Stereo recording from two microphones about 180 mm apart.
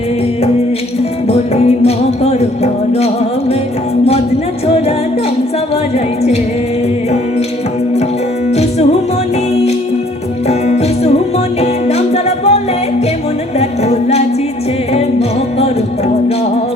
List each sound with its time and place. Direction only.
1.3 s music: 35° left (ahead or behind)
10.5 s music: 35° left (ahead or behind)
13.6 s music: 35° left (ahead or behind)